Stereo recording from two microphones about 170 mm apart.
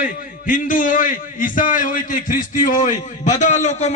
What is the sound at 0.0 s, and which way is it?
A man's voice, 55° left (ahead or behind).